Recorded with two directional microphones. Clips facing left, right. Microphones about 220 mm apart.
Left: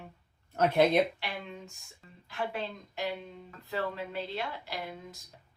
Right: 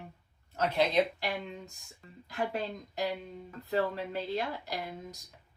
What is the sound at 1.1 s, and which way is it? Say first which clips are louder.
Speech: right 4 dB; 35° right (ahead or behind).